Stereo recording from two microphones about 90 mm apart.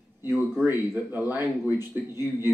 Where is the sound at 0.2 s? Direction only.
25° right (ahead or behind).